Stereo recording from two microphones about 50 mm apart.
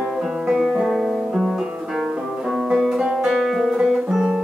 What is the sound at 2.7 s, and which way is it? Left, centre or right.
Music, centre.